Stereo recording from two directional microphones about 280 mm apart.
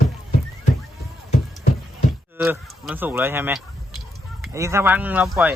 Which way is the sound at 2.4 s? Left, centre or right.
Centre.